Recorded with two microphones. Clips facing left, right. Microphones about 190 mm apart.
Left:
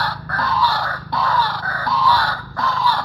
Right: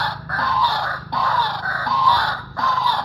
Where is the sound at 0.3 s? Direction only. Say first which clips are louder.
Left 2 dB; 15° right (ahead or behind).